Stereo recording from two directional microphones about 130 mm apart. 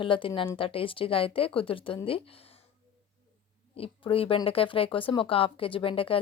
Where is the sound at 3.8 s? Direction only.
45° left (ahead or behind).